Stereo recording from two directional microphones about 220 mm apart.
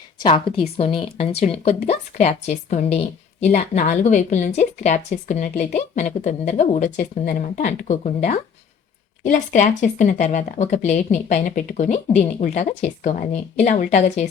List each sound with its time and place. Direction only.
0.2 s speech: 20° left (ahead or behind)